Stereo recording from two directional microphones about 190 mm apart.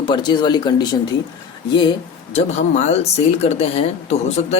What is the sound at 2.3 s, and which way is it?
Speech, 35° left (ahead or behind).